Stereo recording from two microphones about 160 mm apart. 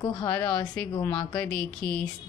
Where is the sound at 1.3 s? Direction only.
10° left (ahead or behind).